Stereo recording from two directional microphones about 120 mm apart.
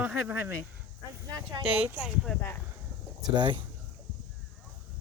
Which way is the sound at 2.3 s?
15° left (ahead or behind).